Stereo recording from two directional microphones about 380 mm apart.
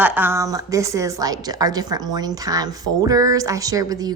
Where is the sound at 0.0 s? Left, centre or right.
Centre.